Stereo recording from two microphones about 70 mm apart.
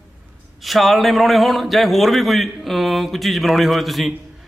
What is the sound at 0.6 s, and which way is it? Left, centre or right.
A man's voice, centre.